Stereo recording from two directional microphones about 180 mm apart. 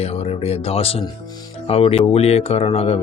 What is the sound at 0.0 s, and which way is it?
Speech, 35° left (ahead or behind).